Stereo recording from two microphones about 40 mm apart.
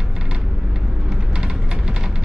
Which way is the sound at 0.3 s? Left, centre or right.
Centre.